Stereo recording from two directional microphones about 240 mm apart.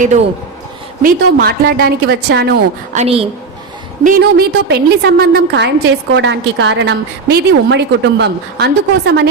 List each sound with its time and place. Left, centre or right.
1.0 s a woman's voice: right
2.9 s a woman's voice: right
4.0 s a woman's voice: right